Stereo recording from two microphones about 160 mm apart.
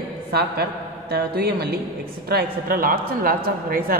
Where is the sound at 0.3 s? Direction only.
75° right (ahead or behind).